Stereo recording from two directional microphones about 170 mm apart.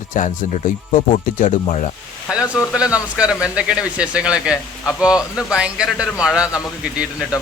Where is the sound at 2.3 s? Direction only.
5° right (ahead or behind).